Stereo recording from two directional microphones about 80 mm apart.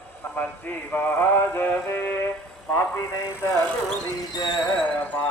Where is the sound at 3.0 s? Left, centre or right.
Left.